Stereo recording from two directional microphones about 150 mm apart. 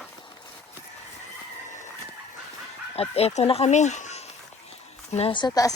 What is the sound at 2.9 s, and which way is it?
Speech, 40° left (ahead or behind).